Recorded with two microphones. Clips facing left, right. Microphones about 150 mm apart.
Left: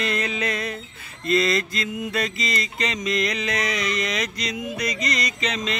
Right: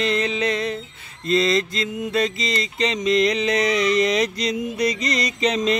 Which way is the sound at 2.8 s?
30° right (ahead or behind).